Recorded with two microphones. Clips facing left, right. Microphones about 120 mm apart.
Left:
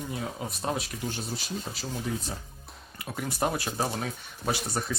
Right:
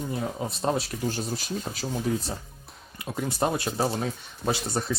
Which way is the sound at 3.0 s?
25° right (ahead or behind).